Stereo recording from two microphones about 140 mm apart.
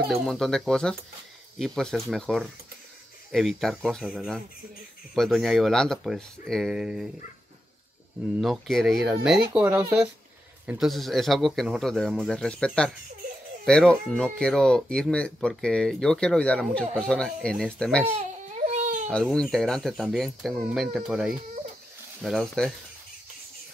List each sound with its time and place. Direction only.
0.1 s a man's voice: 5° left (ahead or behind)
8.4 s a man's voice: centre (ahead or behind)
10.8 s a man's voice: centre (ahead or behind)
18.1 s baby cry: 60° right (ahead or behind)
19.0 s a man's voice: 5° left (ahead or behind)